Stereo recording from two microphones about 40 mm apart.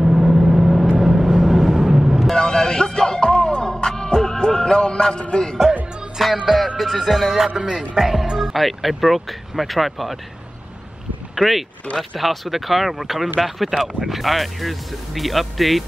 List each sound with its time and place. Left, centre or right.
0.0 s vehicle: centre
2.3 s music: centre
5.3 s a man's voice: left
6.4 s a man's voice: centre
7.3 s a man's voice: centre
11.3 s a man's voice: centre